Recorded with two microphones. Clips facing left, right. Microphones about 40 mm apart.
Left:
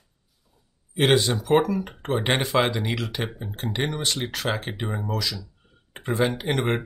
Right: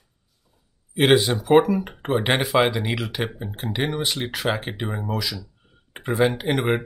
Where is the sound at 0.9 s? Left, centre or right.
Centre.